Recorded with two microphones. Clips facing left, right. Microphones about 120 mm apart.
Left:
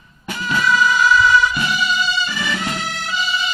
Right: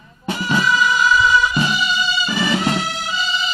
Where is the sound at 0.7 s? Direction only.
10° right (ahead or behind).